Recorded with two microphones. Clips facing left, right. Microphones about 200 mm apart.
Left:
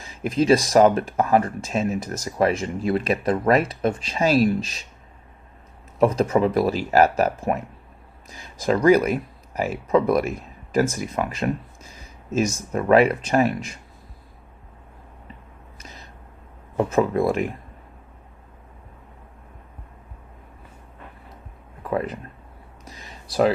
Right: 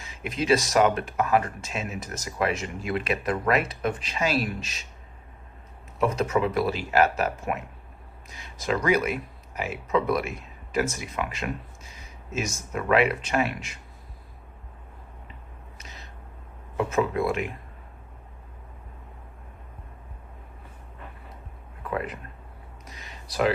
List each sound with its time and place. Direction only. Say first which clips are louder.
0.0 s speech: left 8 dB; 35° left (ahead or behind)
6.0 s speech: left 5 dB; 35° left (ahead or behind)
8.6 s speech: left 7 dB; 40° left (ahead or behind)
15.8 s a sound: left 4 dB; 40° left (ahead or behind)
16.7 s speech: left 5 dB; 35° left (ahead or behind)
21.8 s speech: left 5 dB; 35° left (ahead or behind)
22.9 s a sound: left 4 dB; 35° left (ahead or behind)